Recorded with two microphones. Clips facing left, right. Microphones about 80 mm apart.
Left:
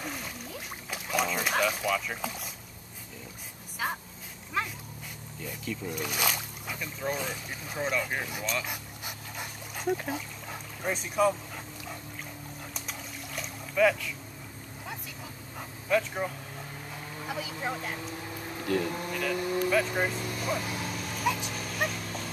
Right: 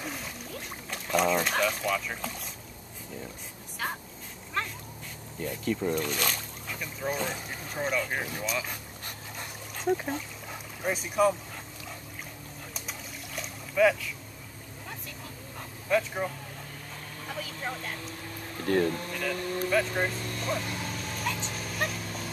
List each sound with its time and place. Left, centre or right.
0.0 s a sound: centre
3.8 s a sound: centre
4.6 s dog: centre
5.4 s speech: right
5.9 s a sound: centre
6.8 s speech: centre
8.6 s dog: centre
9.9 s speech: centre
12.7 s a sound: centre
15.9 s speech: centre
17.2 s speech: centre
19.1 s vehicle: centre